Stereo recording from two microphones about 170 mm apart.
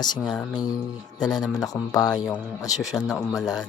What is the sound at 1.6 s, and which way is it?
Speech, 20° left (ahead or behind).